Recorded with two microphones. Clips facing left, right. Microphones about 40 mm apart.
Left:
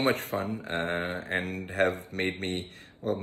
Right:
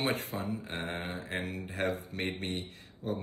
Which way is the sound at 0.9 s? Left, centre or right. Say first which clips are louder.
Left 7 dB; left.